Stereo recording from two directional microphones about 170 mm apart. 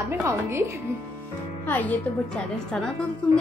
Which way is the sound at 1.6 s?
10° left (ahead or behind).